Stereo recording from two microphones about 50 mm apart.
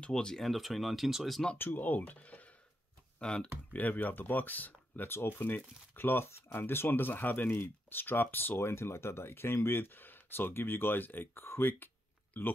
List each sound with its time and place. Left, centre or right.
0.0 s speech: centre
0.5 s speech: centre
1.6 s speech: left
3.2 s speech: centre
3.7 s speech: left
5.1 s speech: left
12.4 s speech: left